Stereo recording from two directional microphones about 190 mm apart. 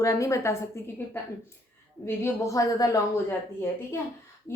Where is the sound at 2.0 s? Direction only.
15° left (ahead or behind).